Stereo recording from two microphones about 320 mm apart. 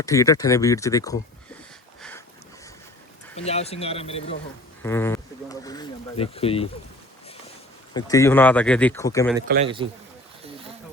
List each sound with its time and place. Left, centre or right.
0.0 s speech: centre
2.0 s a sound: centre
3.3 s speech: centre
4.8 s a sound: centre
7.9 s speech: centre
9.6 s speech: centre